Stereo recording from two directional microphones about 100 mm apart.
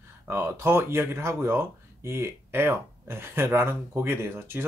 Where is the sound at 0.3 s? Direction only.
25° right (ahead or behind).